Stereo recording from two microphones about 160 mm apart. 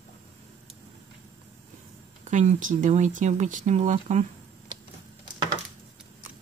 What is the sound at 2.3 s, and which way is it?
Speech, 50° right (ahead or behind).